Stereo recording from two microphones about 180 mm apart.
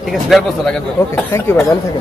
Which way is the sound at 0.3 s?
5° left (ahead or behind).